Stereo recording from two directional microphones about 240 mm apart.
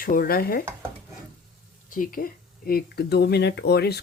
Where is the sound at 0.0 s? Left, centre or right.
Left.